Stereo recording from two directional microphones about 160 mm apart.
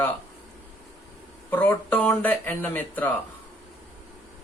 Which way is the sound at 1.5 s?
10° left (ahead or behind).